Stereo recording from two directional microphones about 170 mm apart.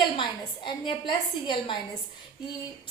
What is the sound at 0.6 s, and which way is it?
A woman's voice, 30° left (ahead or behind).